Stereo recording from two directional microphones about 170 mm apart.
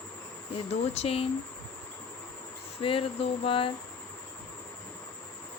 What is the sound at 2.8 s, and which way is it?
Speech, 35° left (ahead or behind).